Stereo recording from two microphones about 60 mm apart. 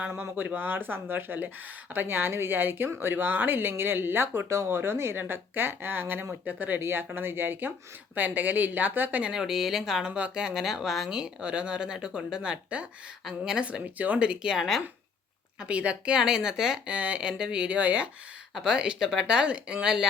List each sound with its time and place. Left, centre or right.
0.3 s speech: right
4.4 s speech: right
9.3 s speech: centre
10.2 s speech: centre
13.7 s speech: right; by 14.8 s centre
15.6 s speech: centre